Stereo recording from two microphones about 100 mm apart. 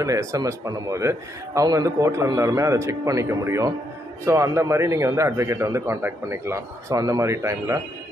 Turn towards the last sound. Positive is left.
turn(degrees=-30)  # may be behind; listen again after turning